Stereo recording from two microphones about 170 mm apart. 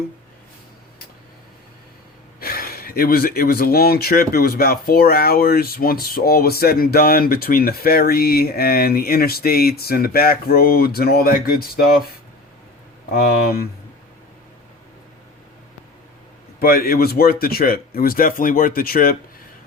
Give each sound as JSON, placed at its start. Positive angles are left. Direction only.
{"t": 2.4, "sound": "speech", "side_deg": 60}
{"t": 13.1, "sound": "speech", "side_deg": 60}
{"t": 16.6, "sound": "speech", "side_deg": 60}